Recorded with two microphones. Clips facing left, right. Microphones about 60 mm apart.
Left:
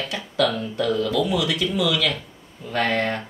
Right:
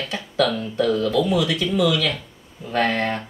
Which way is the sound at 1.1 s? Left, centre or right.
Right.